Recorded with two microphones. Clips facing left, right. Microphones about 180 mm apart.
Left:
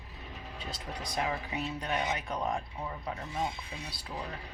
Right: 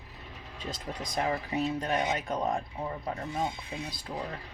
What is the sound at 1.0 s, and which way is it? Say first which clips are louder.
Speech: right 3 dB; 40° right (ahead or behind).